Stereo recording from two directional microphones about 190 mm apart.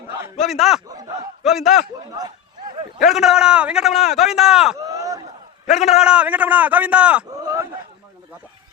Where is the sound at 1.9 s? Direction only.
20° right (ahead or behind).